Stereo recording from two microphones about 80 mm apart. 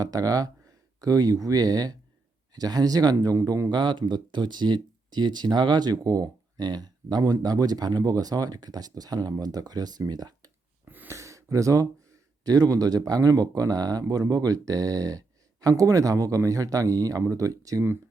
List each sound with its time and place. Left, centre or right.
0.0 s speech: right
3.7 s speech: right
10.8 s a sound: right
11.1 s speech: right